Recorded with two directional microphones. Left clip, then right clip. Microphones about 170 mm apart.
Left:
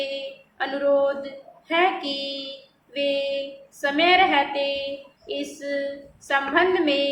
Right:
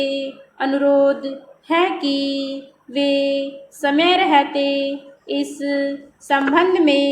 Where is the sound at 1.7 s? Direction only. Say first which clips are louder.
Right 4 dB; 40° right (ahead or behind).